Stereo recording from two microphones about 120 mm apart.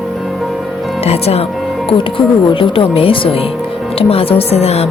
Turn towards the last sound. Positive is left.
turn(degrees=60)  # may be behind; listen again after turning